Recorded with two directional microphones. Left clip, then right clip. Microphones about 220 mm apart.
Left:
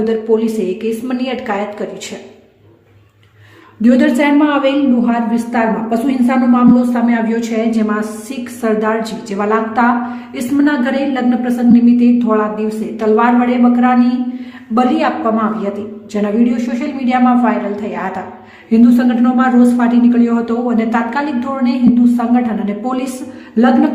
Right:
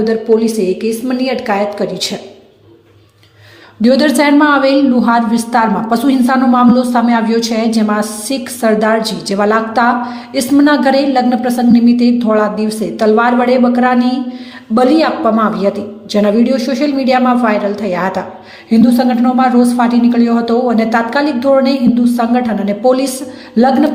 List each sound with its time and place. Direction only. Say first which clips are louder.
0.0 s a woman's voice: right 2 dB; 10° right (ahead or behind)
3.8 s a woman's voice: right 2 dB; 20° right (ahead or behind)